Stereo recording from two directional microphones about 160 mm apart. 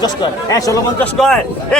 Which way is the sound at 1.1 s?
Centre (ahead or behind).